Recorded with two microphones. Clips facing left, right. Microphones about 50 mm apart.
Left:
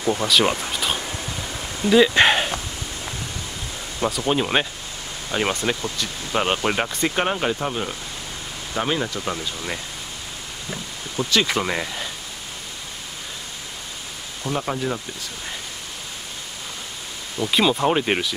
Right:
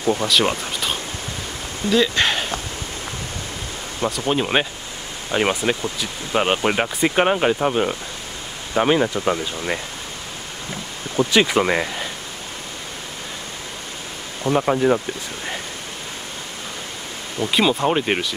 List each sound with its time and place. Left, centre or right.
0.2 s speech: centre
1.9 s speech: centre
4.3 s speech: centre
11.1 s speech: centre
14.4 s speech: right
17.4 s speech: centre